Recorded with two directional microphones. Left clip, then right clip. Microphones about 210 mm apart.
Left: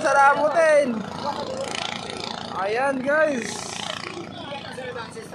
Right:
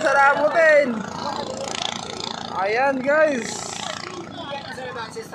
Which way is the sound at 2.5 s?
5° right (ahead or behind).